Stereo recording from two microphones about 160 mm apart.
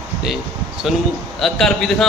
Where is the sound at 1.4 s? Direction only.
Centre (ahead or behind).